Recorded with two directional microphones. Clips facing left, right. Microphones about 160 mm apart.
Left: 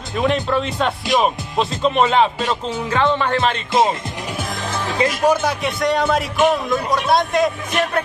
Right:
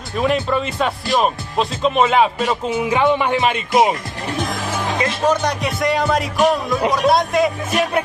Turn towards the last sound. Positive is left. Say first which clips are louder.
# right 2 dB
turn(degrees=-5)  # may be behind; listen again after turning